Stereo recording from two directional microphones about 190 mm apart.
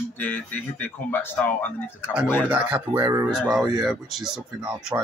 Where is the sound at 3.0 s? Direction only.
20° right (ahead or behind).